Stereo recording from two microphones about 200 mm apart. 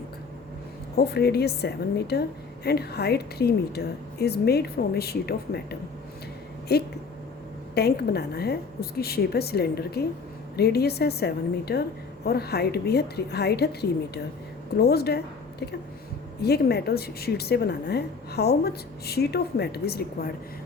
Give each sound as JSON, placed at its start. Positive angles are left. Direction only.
{"t": 0.9, "sound": "a woman's voice", "side_deg": 55}
{"t": 6.7, "sound": "a woman's voice", "side_deg": 55}
{"t": 14.8, "sound": "a woman's voice", "side_deg": 55}
{"t": 16.4, "sound": "a woman's voice", "side_deg": 55}